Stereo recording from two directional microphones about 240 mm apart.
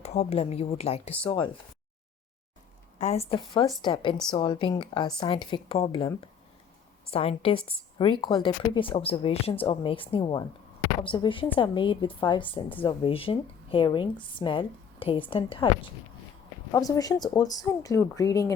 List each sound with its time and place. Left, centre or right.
0.0 s a woman's voice: left
3.0 s a woman's voice: left
16.7 s speech: centre